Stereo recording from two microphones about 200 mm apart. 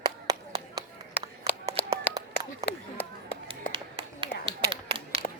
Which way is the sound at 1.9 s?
15° right (ahead or behind).